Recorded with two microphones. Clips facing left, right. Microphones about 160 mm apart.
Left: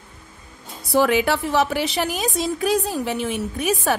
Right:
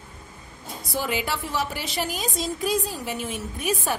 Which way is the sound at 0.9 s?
70° left (ahead or behind).